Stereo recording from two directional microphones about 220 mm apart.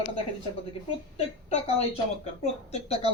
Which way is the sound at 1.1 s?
30° left (ahead or behind).